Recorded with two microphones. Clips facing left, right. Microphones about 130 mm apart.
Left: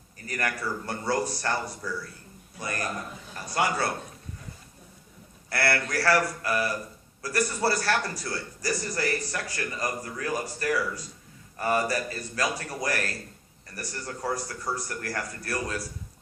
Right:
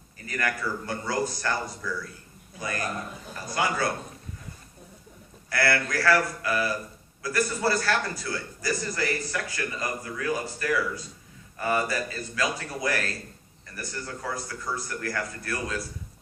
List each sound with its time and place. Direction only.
0.3 s a man's voice: 35° left (ahead or behind)
5.5 s a man's voice: 35° left (ahead or behind)